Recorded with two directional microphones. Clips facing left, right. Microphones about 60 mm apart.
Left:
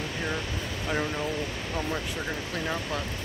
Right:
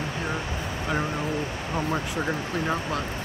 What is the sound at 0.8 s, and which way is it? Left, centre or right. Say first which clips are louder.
Speech: right 1 dB; centre.